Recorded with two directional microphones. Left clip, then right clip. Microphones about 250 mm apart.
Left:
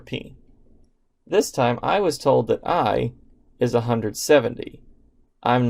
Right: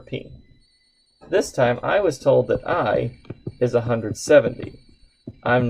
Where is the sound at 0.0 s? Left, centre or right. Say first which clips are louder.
Even; left.